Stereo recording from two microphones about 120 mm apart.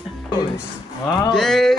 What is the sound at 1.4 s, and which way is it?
Speech, centre (ahead or behind).